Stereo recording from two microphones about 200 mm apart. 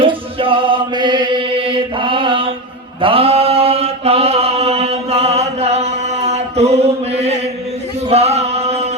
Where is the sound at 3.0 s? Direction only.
30° right (ahead or behind).